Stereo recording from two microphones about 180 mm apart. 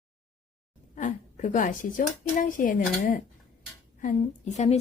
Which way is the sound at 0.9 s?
45° left (ahead or behind).